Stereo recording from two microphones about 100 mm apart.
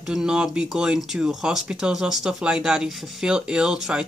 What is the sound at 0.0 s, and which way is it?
Speech, 5° right (ahead or behind).